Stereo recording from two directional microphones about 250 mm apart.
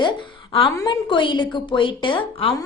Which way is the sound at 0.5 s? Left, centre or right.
Centre.